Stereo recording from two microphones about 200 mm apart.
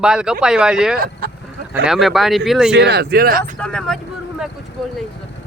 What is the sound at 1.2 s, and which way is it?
Speech, 50° right (ahead or behind).